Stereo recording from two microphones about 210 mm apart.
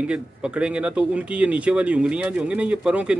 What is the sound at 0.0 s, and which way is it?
Speech, 5° right (ahead or behind).